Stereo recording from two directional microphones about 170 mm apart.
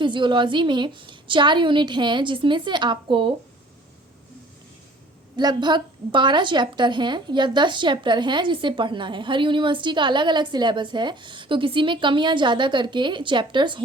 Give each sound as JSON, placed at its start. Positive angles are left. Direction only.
{"t": 0.0, "sound": "a woman's voice", "side_deg": -30}
{"t": 5.4, "sound": "a woman's voice", "side_deg": -25}